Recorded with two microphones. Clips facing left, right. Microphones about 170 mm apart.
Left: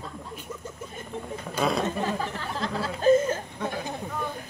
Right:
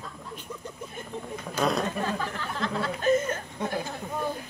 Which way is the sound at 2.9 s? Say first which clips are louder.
Left 5 dB; 30° left (ahead or behind).